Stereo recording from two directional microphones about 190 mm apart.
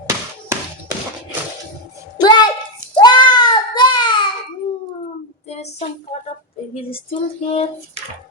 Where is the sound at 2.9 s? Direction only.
25° left (ahead or behind).